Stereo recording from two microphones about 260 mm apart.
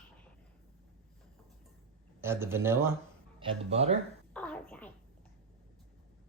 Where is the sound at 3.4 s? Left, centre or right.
Right.